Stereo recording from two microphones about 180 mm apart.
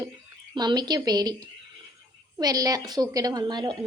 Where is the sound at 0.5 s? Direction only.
25° right (ahead or behind).